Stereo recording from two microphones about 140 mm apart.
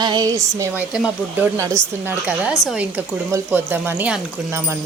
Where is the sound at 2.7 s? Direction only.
10° right (ahead or behind).